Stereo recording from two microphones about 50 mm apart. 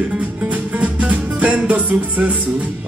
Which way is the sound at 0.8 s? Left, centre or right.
Right.